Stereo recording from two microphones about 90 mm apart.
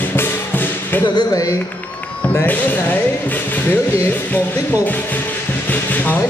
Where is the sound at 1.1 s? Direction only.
40° left (ahead or behind).